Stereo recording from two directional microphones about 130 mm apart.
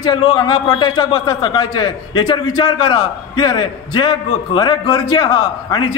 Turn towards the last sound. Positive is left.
turn(degrees=40)  # may be behind; listen again after turning